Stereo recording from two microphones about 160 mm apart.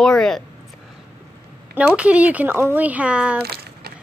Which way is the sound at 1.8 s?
10° right (ahead or behind).